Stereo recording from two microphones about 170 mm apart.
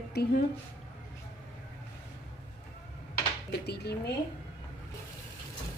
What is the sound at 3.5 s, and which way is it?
Dishes, 70° left (ahead or behind).